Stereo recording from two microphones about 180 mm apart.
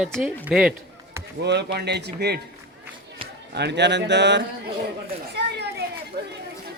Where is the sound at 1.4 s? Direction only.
70° right (ahead or behind).